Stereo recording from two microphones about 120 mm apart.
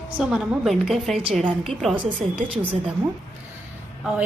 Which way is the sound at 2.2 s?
60° right (ahead or behind).